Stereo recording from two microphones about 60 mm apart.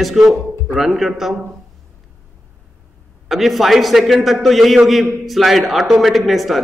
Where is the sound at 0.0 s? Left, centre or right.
Centre.